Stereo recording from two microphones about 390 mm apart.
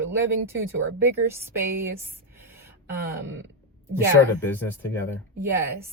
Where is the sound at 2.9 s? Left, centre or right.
Right.